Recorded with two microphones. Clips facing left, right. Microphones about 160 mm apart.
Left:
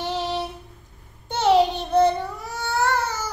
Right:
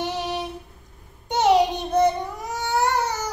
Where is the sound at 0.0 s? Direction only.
15° right (ahead or behind).